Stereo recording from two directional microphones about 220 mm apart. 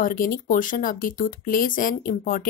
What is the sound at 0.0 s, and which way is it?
A woman's voice, 40° left (ahead or behind).